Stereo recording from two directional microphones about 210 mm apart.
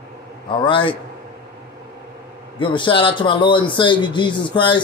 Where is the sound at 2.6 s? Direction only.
25° left (ahead or behind).